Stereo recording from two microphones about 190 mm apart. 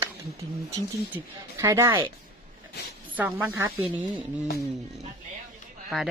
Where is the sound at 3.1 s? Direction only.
10° right (ahead or behind).